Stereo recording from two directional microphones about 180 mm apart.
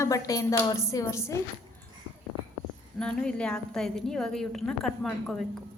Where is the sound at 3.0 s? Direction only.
5° left (ahead or behind).